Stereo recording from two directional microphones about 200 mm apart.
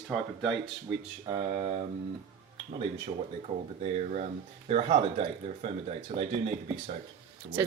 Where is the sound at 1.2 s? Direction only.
25° right (ahead or behind).